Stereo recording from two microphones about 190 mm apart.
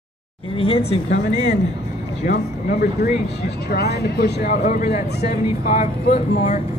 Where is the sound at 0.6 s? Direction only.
30° left (ahead or behind).